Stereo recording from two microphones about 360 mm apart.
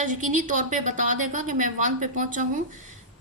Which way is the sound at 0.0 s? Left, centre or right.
Right.